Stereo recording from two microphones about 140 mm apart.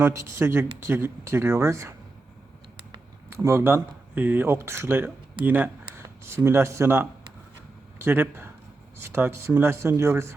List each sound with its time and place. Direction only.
0.0 s speech: 20° right (ahead or behind)
3.2 s a man's voice: 20° right (ahead or behind)